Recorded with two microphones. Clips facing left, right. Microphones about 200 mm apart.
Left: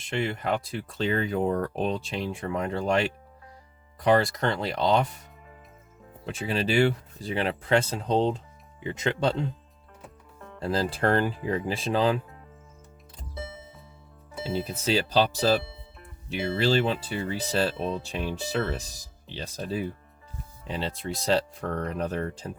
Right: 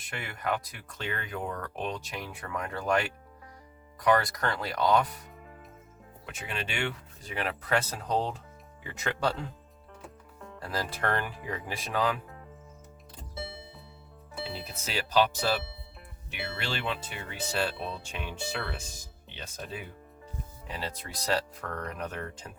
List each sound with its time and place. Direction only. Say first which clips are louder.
0.0 s speech: left 7 dB; 25° left (ahead or behind)
6.2 s speech: left 10 dB; 30° left (ahead or behind)
10.6 s speech: left 7 dB; 30° left (ahead or behind)
14.3 s speech: left 8 dB; 25° left (ahead or behind)